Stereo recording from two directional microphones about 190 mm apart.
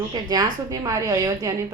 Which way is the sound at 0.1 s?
20° right (ahead or behind).